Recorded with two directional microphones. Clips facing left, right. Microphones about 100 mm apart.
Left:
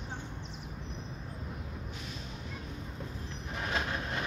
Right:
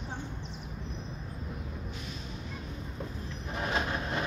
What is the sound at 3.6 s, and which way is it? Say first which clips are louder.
Train: right 3 dB; 25° right (ahead or behind).